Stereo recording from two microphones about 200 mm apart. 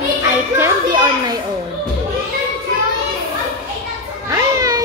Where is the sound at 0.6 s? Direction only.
20° right (ahead or behind).